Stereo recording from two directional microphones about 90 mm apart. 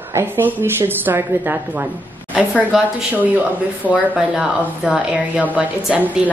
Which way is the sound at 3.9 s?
15° right (ahead or behind).